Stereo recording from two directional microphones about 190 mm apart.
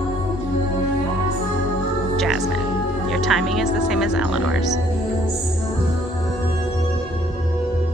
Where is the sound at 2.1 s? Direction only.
Centre (ahead or behind).